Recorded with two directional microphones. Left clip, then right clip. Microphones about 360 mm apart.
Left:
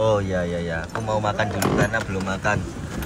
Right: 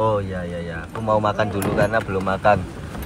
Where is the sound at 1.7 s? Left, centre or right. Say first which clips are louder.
Right 3 dB; centre.